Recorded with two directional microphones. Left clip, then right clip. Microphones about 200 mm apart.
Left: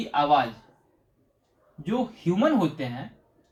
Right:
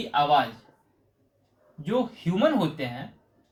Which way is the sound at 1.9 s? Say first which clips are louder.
Even; 30° right (ahead or behind).